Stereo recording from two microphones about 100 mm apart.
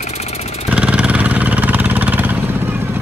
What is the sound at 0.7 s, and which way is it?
Vehicle, 10° right (ahead or behind).